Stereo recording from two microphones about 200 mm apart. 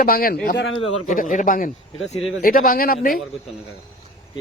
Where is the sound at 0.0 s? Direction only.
50° left (ahead or behind).